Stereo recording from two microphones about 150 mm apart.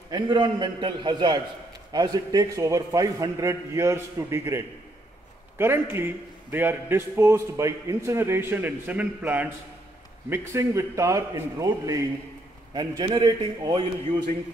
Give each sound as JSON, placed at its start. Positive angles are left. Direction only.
{"t": 0.1, "sound": "a man's voice", "side_deg": -30}